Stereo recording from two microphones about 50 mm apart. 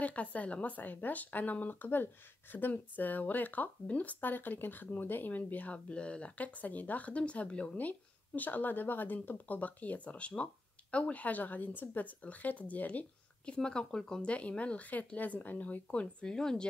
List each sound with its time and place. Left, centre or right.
0.0 s speech: left
8.4 s speech: left
13.5 s speech: centre
14.6 s speech: left